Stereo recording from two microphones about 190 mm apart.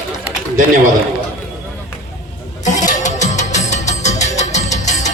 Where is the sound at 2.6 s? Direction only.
40° left (ahead or behind).